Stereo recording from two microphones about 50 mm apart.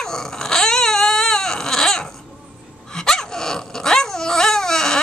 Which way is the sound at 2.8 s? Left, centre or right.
Centre.